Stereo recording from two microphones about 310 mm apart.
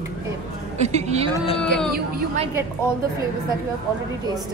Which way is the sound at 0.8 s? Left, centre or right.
Right.